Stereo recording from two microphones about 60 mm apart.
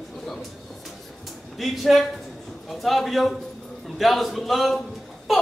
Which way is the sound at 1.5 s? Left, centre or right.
Centre.